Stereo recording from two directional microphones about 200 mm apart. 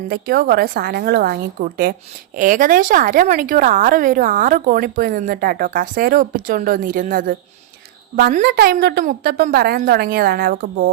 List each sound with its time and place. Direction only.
0.1 s a woman's voice: 50° right (ahead or behind)